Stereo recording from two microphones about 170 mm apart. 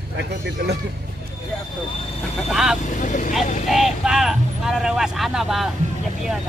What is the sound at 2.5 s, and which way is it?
Speech, 5° right (ahead or behind).